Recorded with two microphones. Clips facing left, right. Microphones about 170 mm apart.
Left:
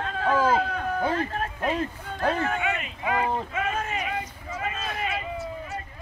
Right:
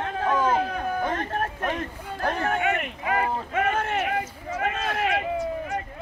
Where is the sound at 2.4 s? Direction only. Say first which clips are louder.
Right 3 dB; 60° right (ahead or behind); by 5.2 s 75° right (ahead or behind).